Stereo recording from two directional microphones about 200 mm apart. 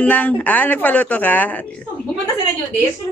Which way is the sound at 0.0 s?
5° left (ahead or behind).